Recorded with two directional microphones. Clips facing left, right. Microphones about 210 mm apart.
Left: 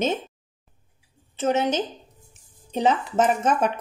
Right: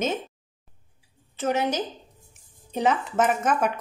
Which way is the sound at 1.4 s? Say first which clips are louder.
Left 2 dB; 25° left (ahead or behind).